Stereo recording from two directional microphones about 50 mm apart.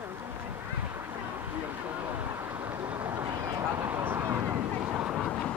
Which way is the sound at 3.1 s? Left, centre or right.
Right.